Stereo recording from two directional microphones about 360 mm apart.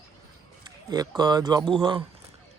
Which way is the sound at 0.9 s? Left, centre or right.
Centre.